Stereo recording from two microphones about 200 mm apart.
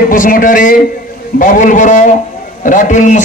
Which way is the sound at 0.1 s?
40° left (ahead or behind).